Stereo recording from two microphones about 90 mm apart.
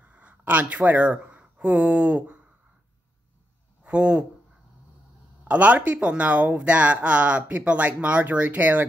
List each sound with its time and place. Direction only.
0.0 s speech: 15° right (ahead or behind)
3.8 s speech: 15° right (ahead or behind)
5.4 s speech: 15° right (ahead or behind)